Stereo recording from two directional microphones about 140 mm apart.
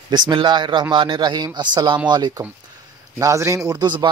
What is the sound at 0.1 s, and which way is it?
Speech, 35° right (ahead or behind).